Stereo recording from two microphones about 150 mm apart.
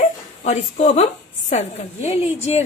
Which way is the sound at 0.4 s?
45° left (ahead or behind).